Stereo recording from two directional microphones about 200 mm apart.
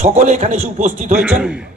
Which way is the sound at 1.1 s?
5° right (ahead or behind).